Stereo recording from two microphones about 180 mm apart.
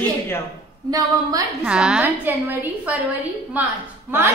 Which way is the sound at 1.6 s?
5° right (ahead or behind).